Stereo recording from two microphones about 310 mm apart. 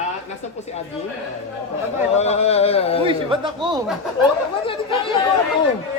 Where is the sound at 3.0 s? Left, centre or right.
Centre.